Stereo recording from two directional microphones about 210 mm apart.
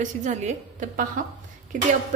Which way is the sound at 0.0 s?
35° right (ahead or behind).